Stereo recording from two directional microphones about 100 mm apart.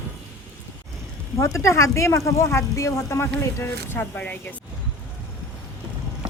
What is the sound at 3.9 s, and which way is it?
Speech, 15° left (ahead or behind).